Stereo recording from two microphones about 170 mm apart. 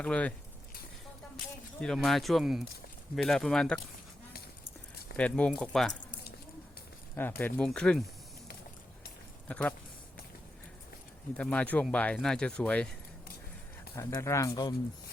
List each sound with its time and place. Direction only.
0.0 s speech: 5° left (ahead or behind)
1.8 s speech: centre (ahead or behind)
5.1 s speech: 5° left (ahead or behind)
7.2 s speech: 10° left (ahead or behind)
9.5 s speech: 5° left (ahead or behind)
11.3 s speech: 5° left (ahead or behind)
13.9 s speech: 15° left (ahead or behind)